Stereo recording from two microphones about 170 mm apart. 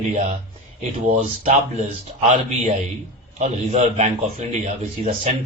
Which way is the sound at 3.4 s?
40° right (ahead or behind).